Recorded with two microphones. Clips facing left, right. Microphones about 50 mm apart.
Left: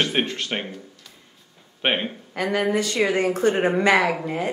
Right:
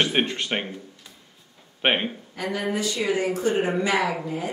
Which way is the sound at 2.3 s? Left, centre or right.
Left.